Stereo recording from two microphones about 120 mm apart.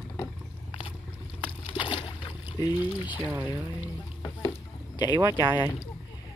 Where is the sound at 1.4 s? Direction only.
45° left (ahead or behind).